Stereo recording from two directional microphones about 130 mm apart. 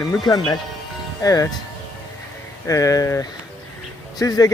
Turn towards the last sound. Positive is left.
turn(degrees=30)  # may be behind; listen again after turning